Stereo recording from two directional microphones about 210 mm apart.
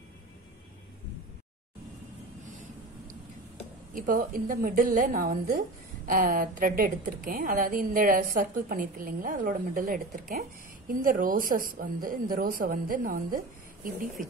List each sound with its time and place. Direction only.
3.9 s a woman's voice: 40° right (ahead or behind)